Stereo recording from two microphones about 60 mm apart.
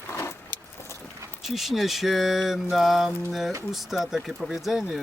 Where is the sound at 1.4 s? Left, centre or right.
Centre.